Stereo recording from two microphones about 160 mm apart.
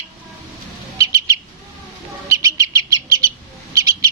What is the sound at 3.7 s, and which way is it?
Owl, 20° right (ahead or behind).